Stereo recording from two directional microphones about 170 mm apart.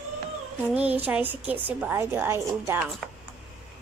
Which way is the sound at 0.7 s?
10° right (ahead or behind).